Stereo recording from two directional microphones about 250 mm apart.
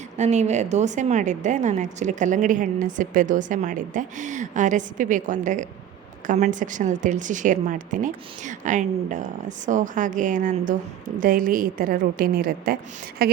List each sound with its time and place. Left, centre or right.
0.2 s a woman's voice: right